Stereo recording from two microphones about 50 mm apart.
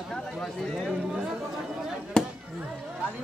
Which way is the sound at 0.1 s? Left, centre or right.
Centre.